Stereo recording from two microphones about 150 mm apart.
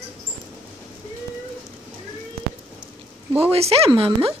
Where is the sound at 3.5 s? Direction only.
40° right (ahead or behind).